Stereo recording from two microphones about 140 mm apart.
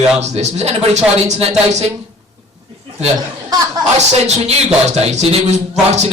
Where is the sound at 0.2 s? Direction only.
50° right (ahead or behind).